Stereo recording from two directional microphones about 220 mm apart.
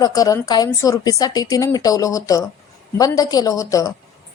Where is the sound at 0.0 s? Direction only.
15° left (ahead or behind).